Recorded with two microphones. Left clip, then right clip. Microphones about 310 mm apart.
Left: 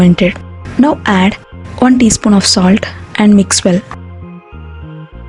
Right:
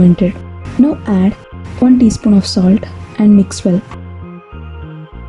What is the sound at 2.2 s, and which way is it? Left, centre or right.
Speech, left.